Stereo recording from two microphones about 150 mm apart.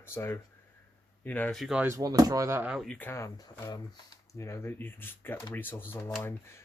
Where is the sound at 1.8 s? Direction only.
20° right (ahead or behind).